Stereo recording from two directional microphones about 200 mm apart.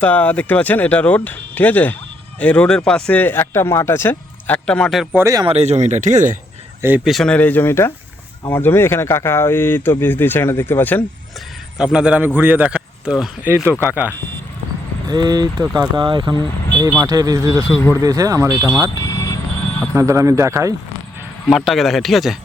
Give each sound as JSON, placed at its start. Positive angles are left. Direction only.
{"t": 0.0, "sound": "speech", "side_deg": 10}
{"t": 5.2, "sound": "speech", "side_deg": -20}
{"t": 5.5, "sound": "speech", "side_deg": -35}
{"t": 6.8, "sound": "speech", "side_deg": -5}
{"t": 11.8, "sound": "a man's voice", "side_deg": -5}
{"t": 14.1, "sound": "speech", "side_deg": 10}
{"t": 15.0, "sound": "a man's voice", "side_deg": -20}
{"t": 17.7, "sound": "speech", "side_deg": 10}
{"t": 17.9, "sound": "a man's voice", "side_deg": -15}
{"t": 19.0, "sound": "vehicle", "side_deg": 15}
{"t": 19.9, "sound": "a man's voice", "side_deg": -15}
{"t": 21.4, "sound": "speech", "side_deg": 0}